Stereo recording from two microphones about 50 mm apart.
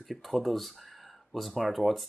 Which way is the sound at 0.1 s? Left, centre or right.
Centre.